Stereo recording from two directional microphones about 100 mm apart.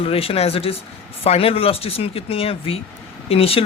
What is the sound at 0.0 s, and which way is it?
Speech, 70° left (ahead or behind).